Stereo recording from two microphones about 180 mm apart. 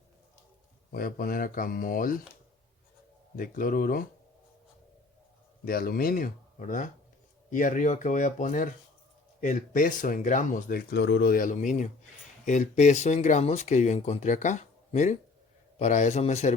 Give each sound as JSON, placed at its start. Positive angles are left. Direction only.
{"t": 0.9, "sound": "speech", "side_deg": 55}
{"t": 3.3, "sound": "speech", "side_deg": 50}
{"t": 5.6, "sound": "speech", "side_deg": 55}